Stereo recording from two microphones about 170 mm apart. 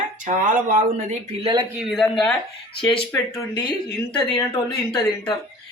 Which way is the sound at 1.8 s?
Centre (ahead or behind).